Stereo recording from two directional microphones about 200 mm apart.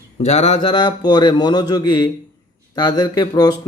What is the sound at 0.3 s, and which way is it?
Speech, 30° left (ahead or behind).